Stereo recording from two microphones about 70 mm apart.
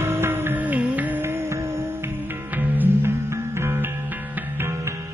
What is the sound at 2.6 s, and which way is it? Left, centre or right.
Music, right.